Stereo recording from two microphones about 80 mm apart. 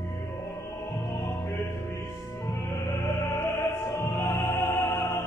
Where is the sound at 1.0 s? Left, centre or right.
Left.